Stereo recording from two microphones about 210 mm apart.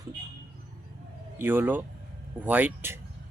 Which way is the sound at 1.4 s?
10° right (ahead or behind).